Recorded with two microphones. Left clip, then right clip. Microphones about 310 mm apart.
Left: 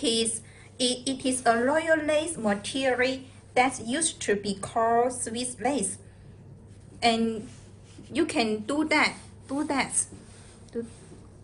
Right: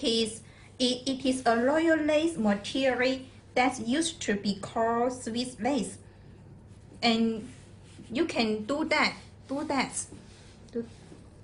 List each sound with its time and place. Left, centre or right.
0.0 s a sound: left
0.8 s a woman's voice: left
7.0 s a woman's voice: left